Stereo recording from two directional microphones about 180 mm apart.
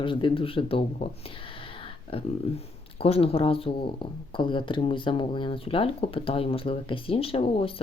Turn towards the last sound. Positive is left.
turn(degrees=30)  # may be behind; listen again after turning